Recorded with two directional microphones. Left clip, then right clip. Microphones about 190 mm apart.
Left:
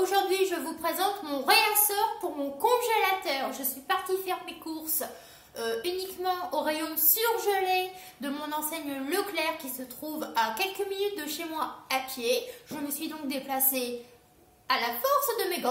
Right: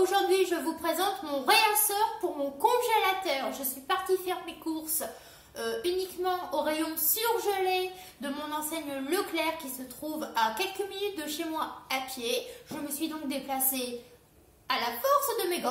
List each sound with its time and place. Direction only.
0.0 s a woman's voice: centre (ahead or behind)